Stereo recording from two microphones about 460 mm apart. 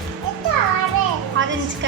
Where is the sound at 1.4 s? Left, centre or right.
Right.